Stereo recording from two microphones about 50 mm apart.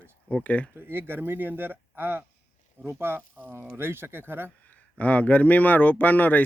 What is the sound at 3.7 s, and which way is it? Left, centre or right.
Speech, right.